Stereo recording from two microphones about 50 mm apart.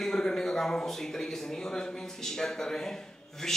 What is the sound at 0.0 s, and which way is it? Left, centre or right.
A man's voice, centre.